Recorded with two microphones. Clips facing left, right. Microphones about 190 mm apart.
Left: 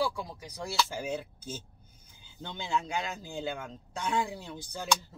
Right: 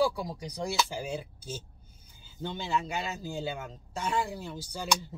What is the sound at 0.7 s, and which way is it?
Speech, 10° right (ahead or behind).